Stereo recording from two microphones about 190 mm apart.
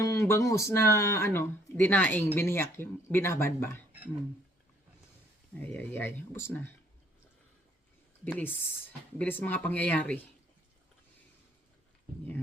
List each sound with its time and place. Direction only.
0.0 s speech: 15° left (ahead or behind)
5.7 s speech: 10° left (ahead or behind)
9.1 s speech: 10° left (ahead or behind)